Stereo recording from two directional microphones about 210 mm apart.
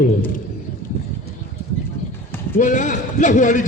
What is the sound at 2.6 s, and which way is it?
Speech, 35° left (ahead or behind).